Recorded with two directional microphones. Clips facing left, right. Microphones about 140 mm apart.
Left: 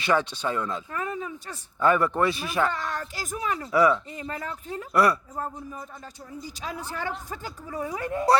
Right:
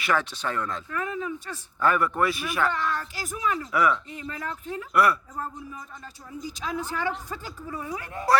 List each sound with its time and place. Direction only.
0.0 s speech: 20° left (ahead or behind)
0.9 s a sound: 40° left (ahead or behind)
1.8 s speech: 25° left (ahead or behind); by 3.7 s 40° left (ahead or behind)
3.7 s speech: 30° left (ahead or behind)
4.3 s a woman's voice: 40° left (ahead or behind)
6.7 s a woman's voice: 35° left (ahead or behind)